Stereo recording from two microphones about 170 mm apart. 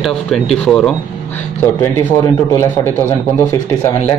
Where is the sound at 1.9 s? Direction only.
20° left (ahead or behind).